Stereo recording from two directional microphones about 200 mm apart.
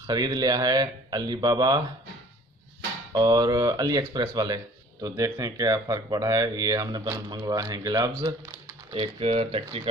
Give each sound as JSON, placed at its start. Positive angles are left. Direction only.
{"t": 0.1, "sound": "speech", "side_deg": -20}
{"t": 3.1, "sound": "speech", "side_deg": -20}